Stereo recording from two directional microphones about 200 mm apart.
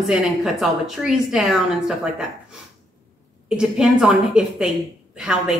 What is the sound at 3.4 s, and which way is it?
A woman's voice, 5° right (ahead or behind).